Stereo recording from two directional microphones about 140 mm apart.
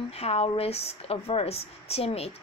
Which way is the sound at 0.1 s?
45° left (ahead or behind).